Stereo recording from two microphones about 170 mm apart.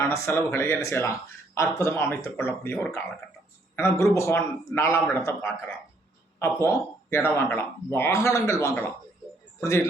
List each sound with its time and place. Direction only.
0.1 s a man's voice: 15° left (ahead or behind)